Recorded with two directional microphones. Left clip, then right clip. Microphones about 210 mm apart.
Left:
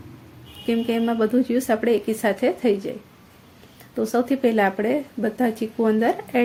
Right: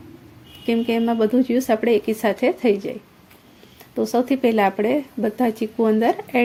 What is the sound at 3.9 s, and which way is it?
Speech, 25° right (ahead or behind).